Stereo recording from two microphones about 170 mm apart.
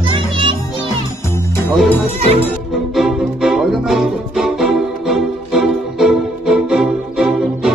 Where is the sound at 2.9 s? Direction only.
Centre (ahead or behind).